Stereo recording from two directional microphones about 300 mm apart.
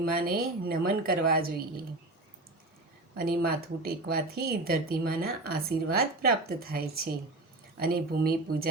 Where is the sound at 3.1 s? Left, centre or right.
Right.